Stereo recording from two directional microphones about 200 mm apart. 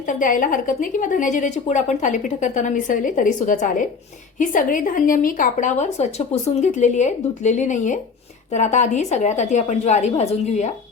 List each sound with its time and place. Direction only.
0.1 s a woman's voice: 40° left (ahead or behind)